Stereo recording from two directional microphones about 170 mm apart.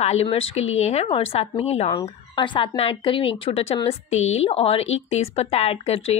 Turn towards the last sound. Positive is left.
turn(degrees=35)  # may be behind; listen again after turning